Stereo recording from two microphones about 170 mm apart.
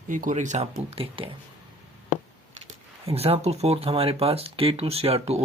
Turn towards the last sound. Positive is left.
turn(degrees=-35)  # may be behind; listen again after turning